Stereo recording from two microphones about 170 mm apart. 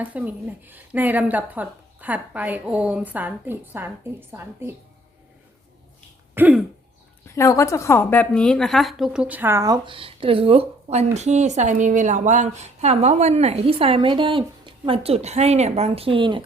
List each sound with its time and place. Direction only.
0.0 s speech: 10° right (ahead or behind)
6.3 s speech: 10° right (ahead or behind)
7.3 s a woman's voice: 15° left (ahead or behind); by 16.4 s 30° right (ahead or behind)